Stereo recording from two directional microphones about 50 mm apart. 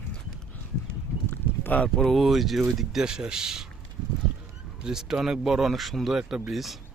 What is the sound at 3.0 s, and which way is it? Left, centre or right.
Speech, centre.